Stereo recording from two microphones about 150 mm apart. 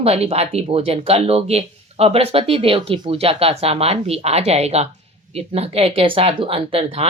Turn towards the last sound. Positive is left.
turn(degrees=-40)  # may be behind; listen again after turning